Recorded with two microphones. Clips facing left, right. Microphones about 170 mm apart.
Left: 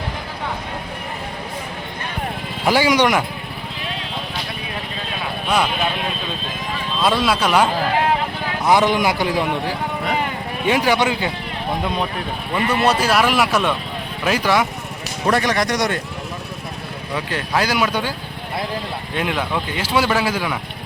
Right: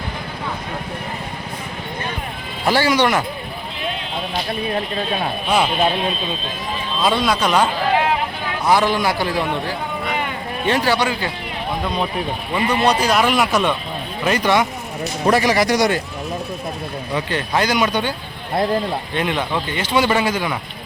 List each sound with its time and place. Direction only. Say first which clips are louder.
2.6 s speech: left 1 dB; 15° left (ahead or behind)
7.0 s speech: even; centre (ahead or behind)
8.7 s a man's voice: left 1 dB; 20° left (ahead or behind)
12.5 s speech: even; 10° right (ahead or behind)
12.8 s speech: even; 5° left (ahead or behind)
17.2 s speech: right 1 dB; centre (ahead or behind)
19.1 s speech: left 1 dB; 5° left (ahead or behind)